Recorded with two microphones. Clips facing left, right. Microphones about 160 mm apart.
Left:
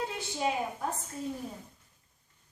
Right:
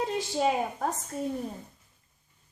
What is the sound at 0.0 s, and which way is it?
Speech, 70° right (ahead or behind).